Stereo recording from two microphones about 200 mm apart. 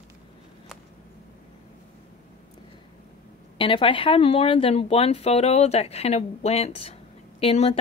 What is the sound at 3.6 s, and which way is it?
Speech, 25° left (ahead or behind).